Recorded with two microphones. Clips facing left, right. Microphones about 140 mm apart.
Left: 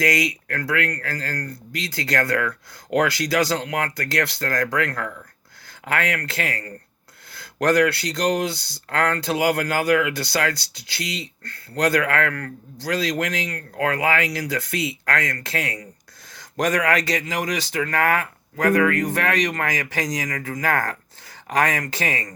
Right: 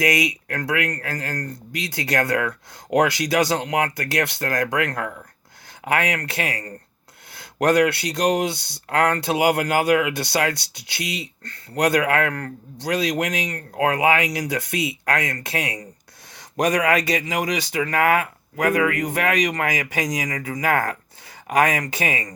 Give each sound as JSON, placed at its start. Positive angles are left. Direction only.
{"t": 0.0, "sound": "speech", "side_deg": -20}